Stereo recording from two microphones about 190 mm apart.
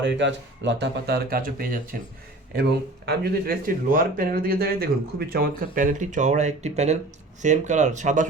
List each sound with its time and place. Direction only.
0.0 s speech: 70° right (ahead or behind); by 2.0 s 50° right (ahead or behind)
3.1 s speech: 55° right (ahead or behind)